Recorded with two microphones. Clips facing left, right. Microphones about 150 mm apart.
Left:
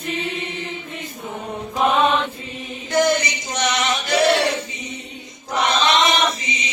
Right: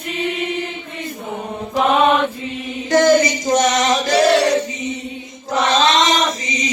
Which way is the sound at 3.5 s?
40° right (ahead or behind).